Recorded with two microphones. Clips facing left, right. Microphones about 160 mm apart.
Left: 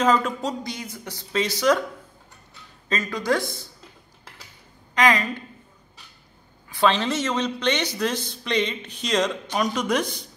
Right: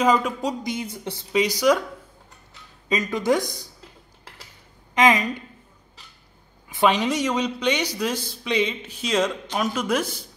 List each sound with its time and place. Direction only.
0.0 s speech: 10° right (ahead or behind)
0.7 s speech: 25° right (ahead or behind)
1.3 s speech: 15° right (ahead or behind)
2.9 s speech: 20° right (ahead or behind)
4.9 s a woman's voice: 20° right (ahead or behind)
6.7 s speech: 15° right (ahead or behind)